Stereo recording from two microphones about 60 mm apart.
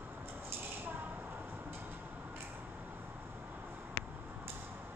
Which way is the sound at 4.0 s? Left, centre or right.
Left.